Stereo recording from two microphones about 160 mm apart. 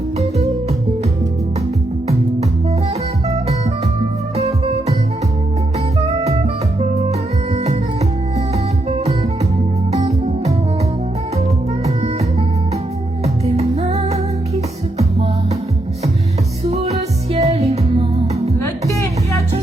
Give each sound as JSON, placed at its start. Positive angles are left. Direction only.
{"t": 4.4, "sound": "music", "side_deg": -40}
{"t": 6.0, "sound": "music", "side_deg": -40}
{"t": 8.9, "sound": "music", "side_deg": -45}
{"t": 13.2, "sound": "music", "side_deg": -40}
{"t": 16.6, "sound": "music", "side_deg": -40}
{"t": 18.6, "sound": "music", "side_deg": 20}